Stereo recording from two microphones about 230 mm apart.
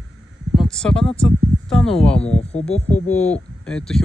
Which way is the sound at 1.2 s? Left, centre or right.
Centre.